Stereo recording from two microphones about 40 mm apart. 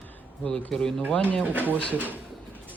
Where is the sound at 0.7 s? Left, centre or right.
Centre.